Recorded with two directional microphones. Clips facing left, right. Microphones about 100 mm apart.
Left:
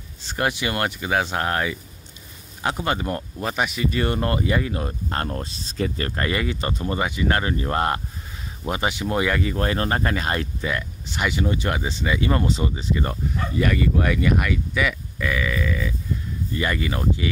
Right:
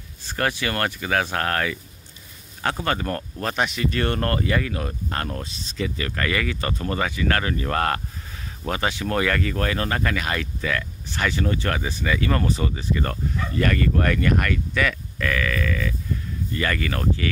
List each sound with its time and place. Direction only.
0.2 s speech: 20° left (ahead or behind)
9.7 s speech: 30° left (ahead or behind)
10.7 s speech: 20° left (ahead or behind)